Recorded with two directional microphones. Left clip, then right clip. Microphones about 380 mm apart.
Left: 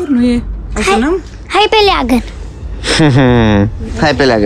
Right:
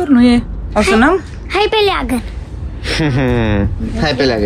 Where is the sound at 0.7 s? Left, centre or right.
Left.